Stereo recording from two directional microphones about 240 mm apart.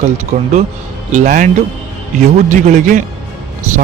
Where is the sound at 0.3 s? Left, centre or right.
Right.